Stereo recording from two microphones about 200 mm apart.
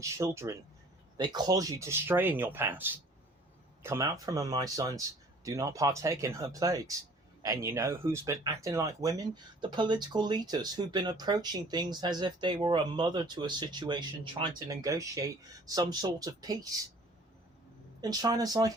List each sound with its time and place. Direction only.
0.0 s speech: 15° right (ahead or behind)
18.0 s speech: 20° right (ahead or behind)